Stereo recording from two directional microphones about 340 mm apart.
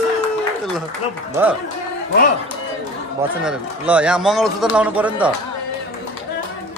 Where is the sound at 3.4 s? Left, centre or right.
Centre.